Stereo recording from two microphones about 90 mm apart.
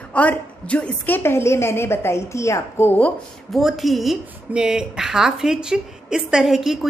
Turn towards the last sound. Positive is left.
turn(degrees=-5)  # may be behind; listen again after turning